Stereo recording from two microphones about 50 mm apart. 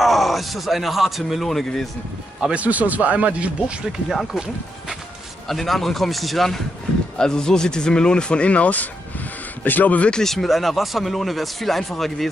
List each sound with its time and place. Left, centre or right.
0.0 s speech: centre
2.5 s speech: right
5.5 s speech: centre
7.2 s speech: centre; by 10.1 s left
10.1 s speech: centre